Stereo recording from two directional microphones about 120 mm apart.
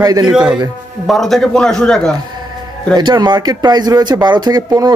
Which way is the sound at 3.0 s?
35° right (ahead or behind).